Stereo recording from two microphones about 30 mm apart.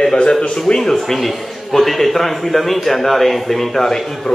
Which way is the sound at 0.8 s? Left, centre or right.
Centre.